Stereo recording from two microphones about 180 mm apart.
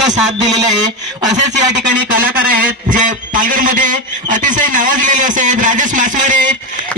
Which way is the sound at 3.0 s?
45° right (ahead or behind).